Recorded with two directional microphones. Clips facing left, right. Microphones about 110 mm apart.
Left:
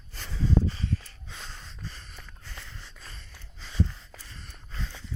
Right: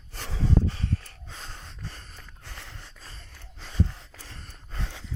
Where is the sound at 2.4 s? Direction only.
65° right (ahead or behind).